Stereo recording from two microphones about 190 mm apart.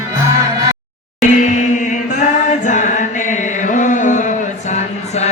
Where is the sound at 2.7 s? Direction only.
40° left (ahead or behind).